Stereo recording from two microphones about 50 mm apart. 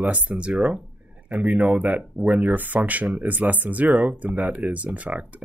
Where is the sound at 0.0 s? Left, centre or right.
Right.